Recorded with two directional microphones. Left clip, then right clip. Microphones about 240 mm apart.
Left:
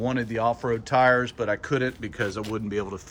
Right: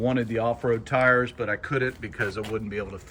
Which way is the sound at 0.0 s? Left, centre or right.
Centre.